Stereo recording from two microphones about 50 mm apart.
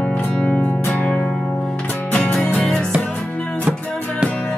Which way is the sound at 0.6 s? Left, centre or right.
Left.